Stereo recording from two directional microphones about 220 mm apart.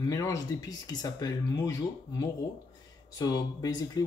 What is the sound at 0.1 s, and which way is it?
Speech, 15° left (ahead or behind).